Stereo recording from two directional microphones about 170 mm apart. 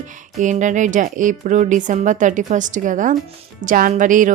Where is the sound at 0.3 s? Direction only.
45° right (ahead or behind).